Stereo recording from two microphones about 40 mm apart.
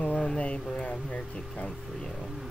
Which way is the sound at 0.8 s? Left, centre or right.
Left.